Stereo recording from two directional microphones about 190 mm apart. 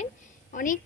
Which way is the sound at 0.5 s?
45° left (ahead or behind).